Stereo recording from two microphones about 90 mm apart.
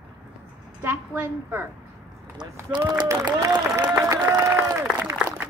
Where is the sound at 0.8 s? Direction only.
25° right (ahead or behind).